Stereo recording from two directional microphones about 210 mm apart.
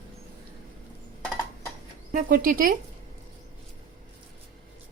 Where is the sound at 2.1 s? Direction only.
40° right (ahead or behind).